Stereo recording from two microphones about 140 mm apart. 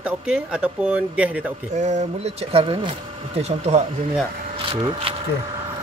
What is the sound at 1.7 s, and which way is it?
Speech, 60° right (ahead or behind).